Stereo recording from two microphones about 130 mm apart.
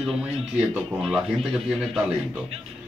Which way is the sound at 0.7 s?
Centre (ahead or behind).